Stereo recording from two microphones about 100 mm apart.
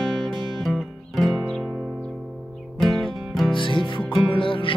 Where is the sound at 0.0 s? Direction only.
Centre (ahead or behind).